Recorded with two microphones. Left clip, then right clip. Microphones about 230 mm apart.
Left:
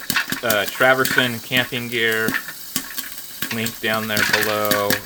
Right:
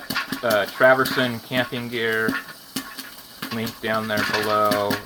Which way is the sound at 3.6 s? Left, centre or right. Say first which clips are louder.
Left 2 dB; centre.